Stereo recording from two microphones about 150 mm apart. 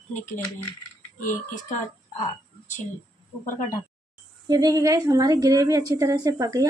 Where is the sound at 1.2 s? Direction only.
60° left (ahead or behind).